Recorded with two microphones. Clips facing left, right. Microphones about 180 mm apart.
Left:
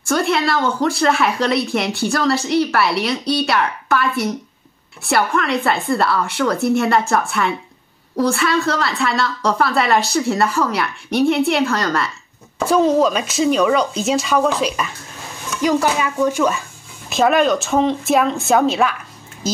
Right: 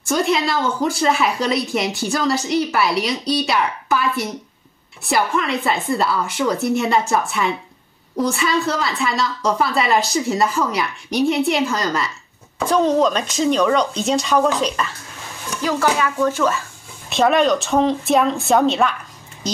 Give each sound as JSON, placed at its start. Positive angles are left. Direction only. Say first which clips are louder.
{"t": 0.1, "sound": "a woman's voice", "louder": "left 1 dB", "side_deg": 0}
{"t": 5.0, "sound": "a woman's voice", "louder": "left 1 dB", "side_deg": 0}
{"t": 15.6, "sound": "speech", "louder": "left 2 dB", "side_deg": 15}
{"t": 17.1, "sound": "a woman's voice", "louder": "left 1 dB", "side_deg": 0}
{"t": 19.4, "sound": "a sound", "louder": "left 2 dB", "side_deg": 5}